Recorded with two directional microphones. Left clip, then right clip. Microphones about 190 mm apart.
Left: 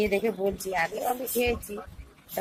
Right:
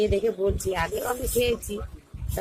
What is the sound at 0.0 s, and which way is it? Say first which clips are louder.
Speech: right 2 dB; 10° right (ahead or behind).